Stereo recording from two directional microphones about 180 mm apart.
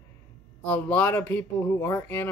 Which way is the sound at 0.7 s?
10° left (ahead or behind).